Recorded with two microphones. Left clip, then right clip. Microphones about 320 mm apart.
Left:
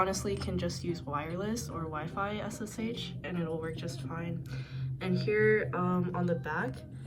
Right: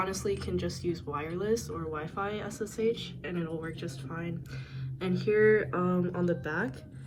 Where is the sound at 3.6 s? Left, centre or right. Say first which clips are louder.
Even; left.